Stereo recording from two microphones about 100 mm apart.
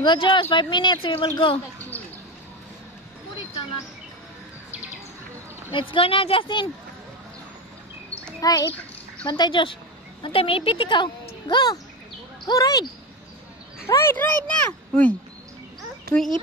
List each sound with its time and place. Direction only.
0.0 s a woman's voice: 55° left (ahead or behind)
5.7 s a woman's voice: 60° left (ahead or behind)
8.4 s a child's voice: 35° left (ahead or behind)
9.2 s a woman's voice: 55° left (ahead or behind)
10.2 s a woman's voice: 65° left (ahead or behind); by 12.8 s 40° left (ahead or behind)
13.8 s speech: 30° left (ahead or behind)
14.1 s speech: 15° left (ahead or behind)